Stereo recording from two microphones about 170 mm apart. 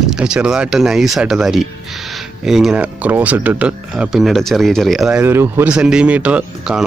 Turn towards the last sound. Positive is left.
turn(degrees=-5)  # may be behind; listen again after turning